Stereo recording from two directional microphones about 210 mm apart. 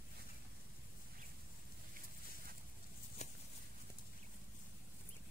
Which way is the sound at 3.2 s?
35° left (ahead or behind).